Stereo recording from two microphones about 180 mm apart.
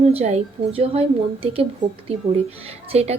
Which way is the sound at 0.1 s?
35° right (ahead or behind).